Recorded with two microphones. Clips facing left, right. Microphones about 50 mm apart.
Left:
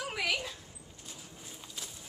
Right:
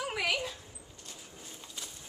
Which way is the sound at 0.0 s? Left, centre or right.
Centre.